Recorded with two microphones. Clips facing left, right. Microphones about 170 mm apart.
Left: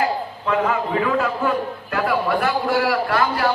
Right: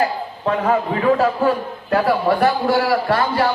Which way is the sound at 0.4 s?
35° right (ahead or behind).